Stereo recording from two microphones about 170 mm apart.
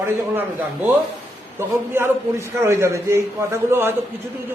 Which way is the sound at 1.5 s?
15° right (ahead or behind).